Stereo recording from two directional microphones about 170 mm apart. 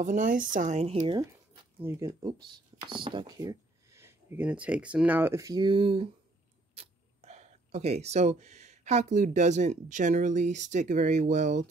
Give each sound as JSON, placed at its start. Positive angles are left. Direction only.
{"t": 0.0, "sound": "speech", "side_deg": -50}
{"t": 1.8, "sound": "speech", "side_deg": -15}